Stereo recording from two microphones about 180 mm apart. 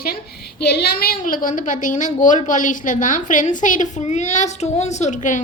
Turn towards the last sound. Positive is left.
turn(degrees=45)  # may be behind; listen again after turning